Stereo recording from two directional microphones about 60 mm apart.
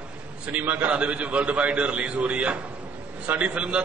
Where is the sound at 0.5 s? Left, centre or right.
Right.